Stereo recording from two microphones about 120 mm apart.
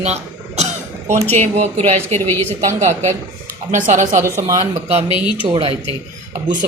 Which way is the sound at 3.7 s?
90° right.